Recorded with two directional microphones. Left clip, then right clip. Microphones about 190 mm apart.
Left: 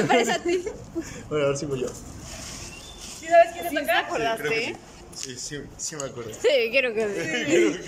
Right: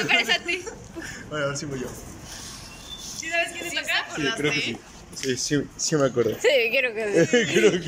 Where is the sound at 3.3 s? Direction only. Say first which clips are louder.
Left 8 dB; 65° left (ahead or behind).